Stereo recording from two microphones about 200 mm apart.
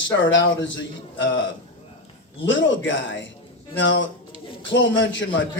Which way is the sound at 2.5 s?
65° left (ahead or behind).